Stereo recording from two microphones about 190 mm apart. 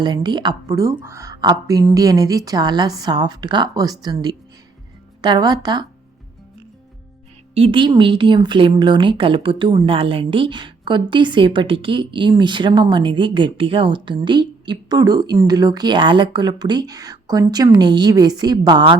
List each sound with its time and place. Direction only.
0.0 s a woman's voice: 25° right (ahead or behind)
7.5 s a woman's voice: 30° right (ahead or behind)